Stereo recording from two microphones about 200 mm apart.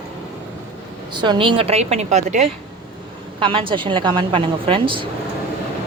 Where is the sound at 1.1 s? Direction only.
25° right (ahead or behind).